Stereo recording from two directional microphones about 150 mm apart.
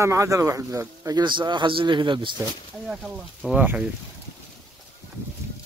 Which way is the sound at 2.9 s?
5° right (ahead or behind).